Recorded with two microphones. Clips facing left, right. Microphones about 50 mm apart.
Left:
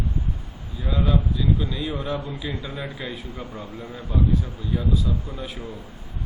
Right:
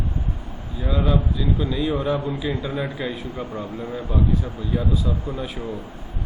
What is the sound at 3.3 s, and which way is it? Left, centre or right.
Speech, right.